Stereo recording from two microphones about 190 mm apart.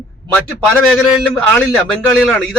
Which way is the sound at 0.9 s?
5° left (ahead or behind).